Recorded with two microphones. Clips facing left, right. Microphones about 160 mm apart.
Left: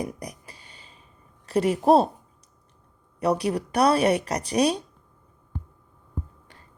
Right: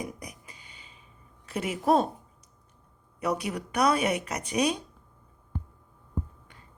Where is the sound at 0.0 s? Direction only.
35° left (ahead or behind).